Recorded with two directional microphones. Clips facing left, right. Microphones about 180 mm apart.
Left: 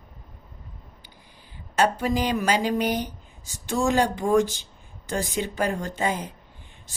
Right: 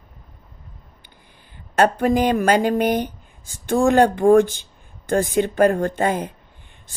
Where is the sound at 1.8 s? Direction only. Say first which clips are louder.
Right 6 dB; 55° right (ahead or behind).